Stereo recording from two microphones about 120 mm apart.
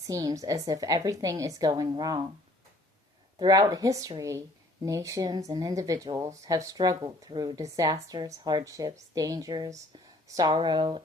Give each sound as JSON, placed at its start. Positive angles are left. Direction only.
{"t": 0.1, "sound": "speech", "side_deg": -30}
{"t": 3.3, "sound": "speech", "side_deg": -30}